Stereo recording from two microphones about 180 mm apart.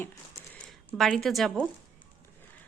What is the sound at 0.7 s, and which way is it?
Speech, centre (ahead or behind).